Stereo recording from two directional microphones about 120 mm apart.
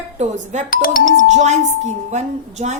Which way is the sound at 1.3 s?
75° right (ahead or behind).